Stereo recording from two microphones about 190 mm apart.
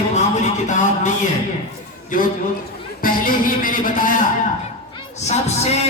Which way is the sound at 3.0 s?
45° left (ahead or behind).